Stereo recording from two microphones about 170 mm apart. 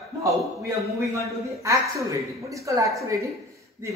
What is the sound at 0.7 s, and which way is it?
A woman's voice, 15° right (ahead or behind).